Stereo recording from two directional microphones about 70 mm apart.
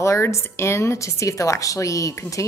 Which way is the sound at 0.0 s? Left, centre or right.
Left.